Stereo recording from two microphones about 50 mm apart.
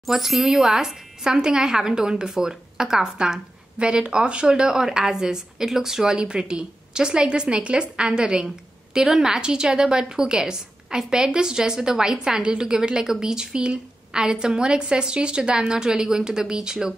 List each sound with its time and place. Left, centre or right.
0.0 s a woman's voice: centre